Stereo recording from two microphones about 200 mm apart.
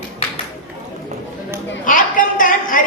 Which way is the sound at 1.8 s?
40° left (ahead or behind).